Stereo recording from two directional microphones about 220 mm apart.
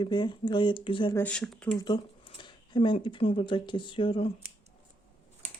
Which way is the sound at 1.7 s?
20° left (ahead or behind).